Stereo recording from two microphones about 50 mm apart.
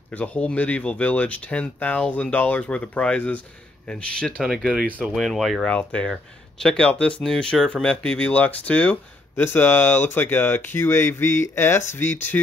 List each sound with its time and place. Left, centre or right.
0.2 s speech: left
5.1 s speech: centre
5.6 s speech: left
6.6 s speech: centre
6.9 s speech: left
9.4 s speech: left